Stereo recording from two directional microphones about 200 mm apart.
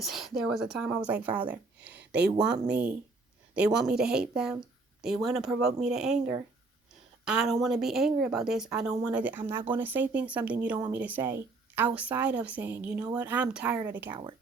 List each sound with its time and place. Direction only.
0.0 s speech: centre (ahead or behind)
2.0 s a sound: 55° right (ahead or behind)
2.4 s speech: 5° right (ahead or behind)
7.3 s speech: 5° right (ahead or behind)